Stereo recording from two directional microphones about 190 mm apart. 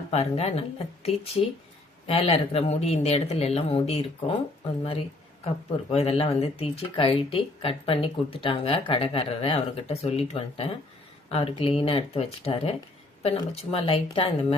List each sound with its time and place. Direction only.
0.1 s speech: 35° left (ahead or behind)